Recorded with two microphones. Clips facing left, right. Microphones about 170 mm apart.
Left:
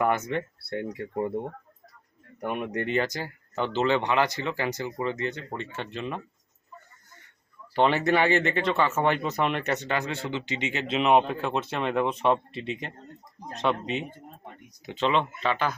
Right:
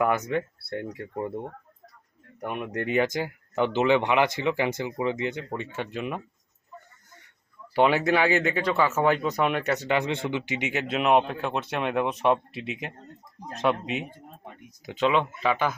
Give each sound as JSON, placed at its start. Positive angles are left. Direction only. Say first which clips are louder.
{"t": 0.2, "sound": "speech", "louder": "right 2 dB", "side_deg": -10}
{"t": 0.7, "sound": "speech", "louder": "left 2 dB", "side_deg": 5}
{"t": 2.4, "sound": "speech", "louder": "left 1 dB", "side_deg": 0}
{"t": 7.7, "sound": "speech", "louder": "right 1 dB", "side_deg": -10}
{"t": 9.9, "sound": "speech", "louder": "right 4 dB", "side_deg": -20}